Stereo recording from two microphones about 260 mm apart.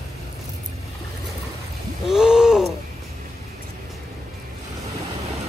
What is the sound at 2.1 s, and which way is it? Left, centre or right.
Gasp, centre.